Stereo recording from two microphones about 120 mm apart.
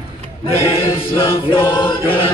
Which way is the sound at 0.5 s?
55° left (ahead or behind).